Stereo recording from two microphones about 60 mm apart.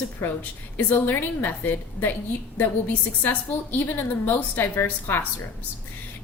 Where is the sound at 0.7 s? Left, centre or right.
Left.